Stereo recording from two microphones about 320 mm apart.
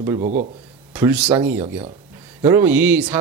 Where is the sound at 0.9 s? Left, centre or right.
Centre.